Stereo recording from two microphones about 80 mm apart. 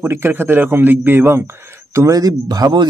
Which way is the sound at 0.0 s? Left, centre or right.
Right.